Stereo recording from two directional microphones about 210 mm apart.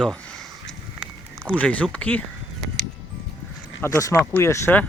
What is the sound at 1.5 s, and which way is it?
Speech, 5° left (ahead or behind).